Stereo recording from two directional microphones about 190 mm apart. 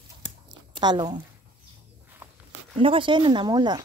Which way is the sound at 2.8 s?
25° right (ahead or behind).